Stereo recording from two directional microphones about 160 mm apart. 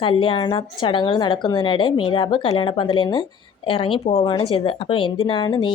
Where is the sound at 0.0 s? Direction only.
30° left (ahead or behind).